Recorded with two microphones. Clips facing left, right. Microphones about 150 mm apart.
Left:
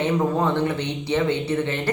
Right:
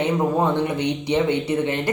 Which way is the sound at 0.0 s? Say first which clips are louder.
Right 1 dB; 15° right (ahead or behind).